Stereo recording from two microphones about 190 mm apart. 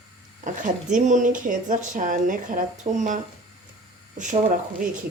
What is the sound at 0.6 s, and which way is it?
Speech, 40° right (ahead or behind).